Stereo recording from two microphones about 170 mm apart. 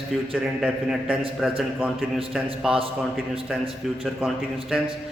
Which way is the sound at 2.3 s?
5° right (ahead or behind).